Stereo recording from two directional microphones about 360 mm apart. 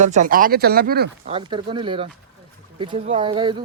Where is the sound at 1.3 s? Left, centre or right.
Centre.